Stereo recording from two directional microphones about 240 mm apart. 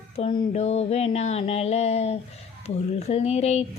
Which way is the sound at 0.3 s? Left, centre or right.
Left.